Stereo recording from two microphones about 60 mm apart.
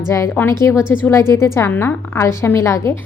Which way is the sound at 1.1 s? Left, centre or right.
Left.